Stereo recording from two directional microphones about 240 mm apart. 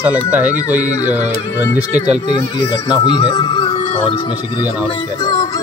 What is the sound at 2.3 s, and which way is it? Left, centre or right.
Speech, centre.